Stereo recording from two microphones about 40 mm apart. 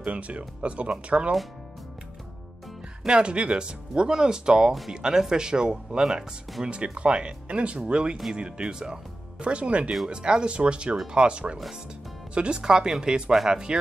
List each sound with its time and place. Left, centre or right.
0.0 s speech: right
3.1 s speech: right